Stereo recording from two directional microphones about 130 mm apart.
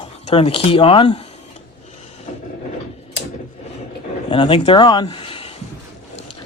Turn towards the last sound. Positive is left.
turn(degrees=45)  # may be behind; listen again after turning